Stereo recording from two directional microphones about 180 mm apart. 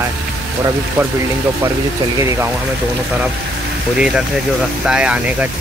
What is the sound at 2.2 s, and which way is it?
Speech, 15° right (ahead or behind).